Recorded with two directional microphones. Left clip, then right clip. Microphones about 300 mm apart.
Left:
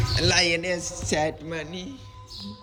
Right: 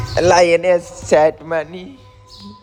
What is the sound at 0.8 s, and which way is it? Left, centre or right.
A man's voice, centre.